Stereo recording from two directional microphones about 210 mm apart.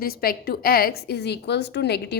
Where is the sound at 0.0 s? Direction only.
45° left (ahead or behind).